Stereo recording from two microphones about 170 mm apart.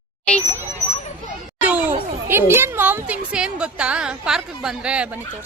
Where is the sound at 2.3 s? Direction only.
15° right (ahead or behind).